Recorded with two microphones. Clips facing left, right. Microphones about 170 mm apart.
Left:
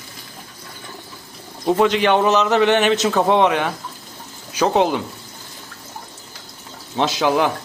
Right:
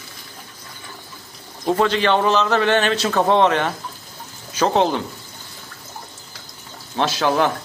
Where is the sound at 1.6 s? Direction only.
15° left (ahead or behind).